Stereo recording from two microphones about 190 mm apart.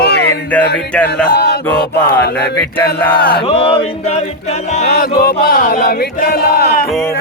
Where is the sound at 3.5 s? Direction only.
30° left (ahead or behind).